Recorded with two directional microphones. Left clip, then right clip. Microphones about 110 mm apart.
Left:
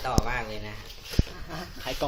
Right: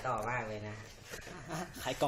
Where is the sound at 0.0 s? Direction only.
40° left (ahead or behind).